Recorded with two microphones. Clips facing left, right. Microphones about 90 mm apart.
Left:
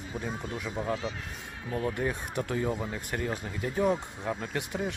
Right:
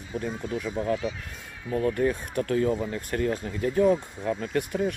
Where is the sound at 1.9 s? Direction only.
20° left (ahead or behind).